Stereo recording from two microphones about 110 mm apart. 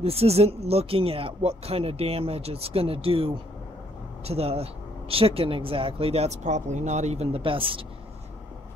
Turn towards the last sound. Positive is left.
turn(degrees=-55)  # may be behind; listen again after turning